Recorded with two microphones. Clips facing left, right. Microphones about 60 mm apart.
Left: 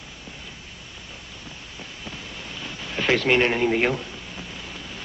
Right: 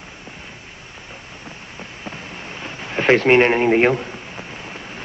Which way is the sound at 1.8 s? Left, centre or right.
Right.